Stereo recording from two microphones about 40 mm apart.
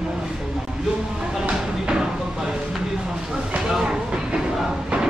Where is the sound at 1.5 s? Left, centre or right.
Right.